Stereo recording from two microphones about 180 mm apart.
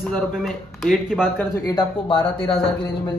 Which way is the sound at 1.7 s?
25° left (ahead or behind).